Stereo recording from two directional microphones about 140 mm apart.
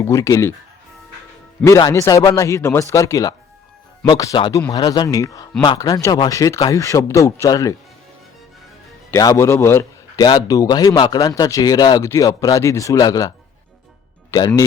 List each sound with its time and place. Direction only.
0.0 s speech: 20° left (ahead or behind)
1.9 s speech: 20° left (ahead or behind)
9.0 s a man's voice: 20° left (ahead or behind)
14.3 s speech: 30° left (ahead or behind)